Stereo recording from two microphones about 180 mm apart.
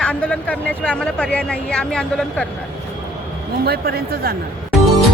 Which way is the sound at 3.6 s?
60° right (ahead or behind).